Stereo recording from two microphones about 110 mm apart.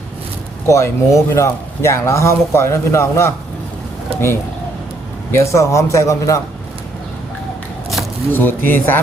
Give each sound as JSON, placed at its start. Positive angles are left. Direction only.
{"t": 0.7, "sound": "speech", "side_deg": 30}
{"t": 4.1, "sound": "bird", "side_deg": -60}
{"t": 5.3, "sound": "speech", "side_deg": 25}
{"t": 8.3, "sound": "speech", "side_deg": 20}